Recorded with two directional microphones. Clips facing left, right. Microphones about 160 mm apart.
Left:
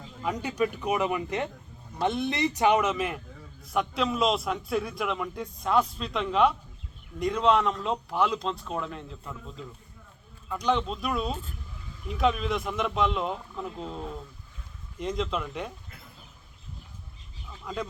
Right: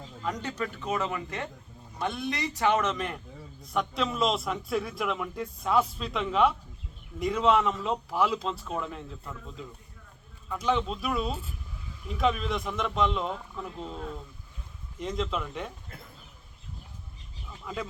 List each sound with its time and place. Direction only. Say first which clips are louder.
0.2 s a man's voice: left 5 dB; 10° left (ahead or behind)
17.7 s a man's voice: left 2 dB; 5° right (ahead or behind)